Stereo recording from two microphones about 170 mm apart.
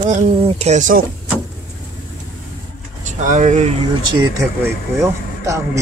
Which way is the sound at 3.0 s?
45° right (ahead or behind).